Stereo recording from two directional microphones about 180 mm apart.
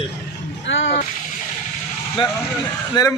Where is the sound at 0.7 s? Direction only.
90° left.